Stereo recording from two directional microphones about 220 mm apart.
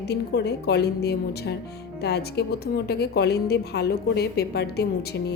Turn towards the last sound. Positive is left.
turn(degrees=45)  # may be behind; listen again after turning